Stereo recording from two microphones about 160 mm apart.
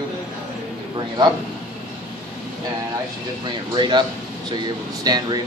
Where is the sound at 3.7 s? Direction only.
30° right (ahead or behind).